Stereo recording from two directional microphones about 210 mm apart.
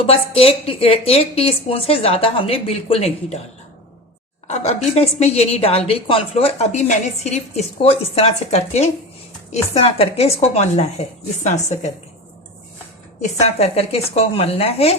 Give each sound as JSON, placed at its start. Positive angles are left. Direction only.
{"t": 0.0, "sound": "a woman's voice", "side_deg": 25}
{"t": 4.4, "sound": "a woman's voice", "side_deg": 30}
{"t": 13.6, "sound": "a woman's voice", "side_deg": 30}